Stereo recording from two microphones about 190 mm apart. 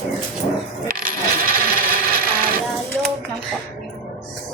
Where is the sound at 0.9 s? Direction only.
50° right (ahead or behind).